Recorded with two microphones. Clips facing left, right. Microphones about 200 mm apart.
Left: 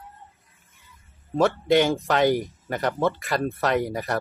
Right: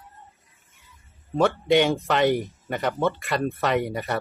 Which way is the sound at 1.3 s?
Centre (ahead or behind).